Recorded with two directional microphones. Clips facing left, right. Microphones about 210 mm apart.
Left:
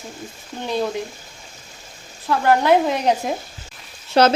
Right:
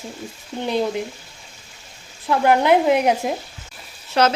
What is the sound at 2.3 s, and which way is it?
Speech, 15° right (ahead or behind).